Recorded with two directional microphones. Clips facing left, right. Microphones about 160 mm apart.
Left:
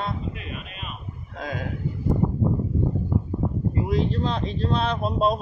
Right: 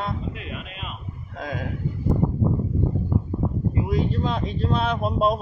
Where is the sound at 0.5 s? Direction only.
90° right.